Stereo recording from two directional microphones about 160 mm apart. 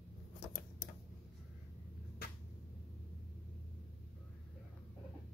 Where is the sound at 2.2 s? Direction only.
70° left (ahead or behind).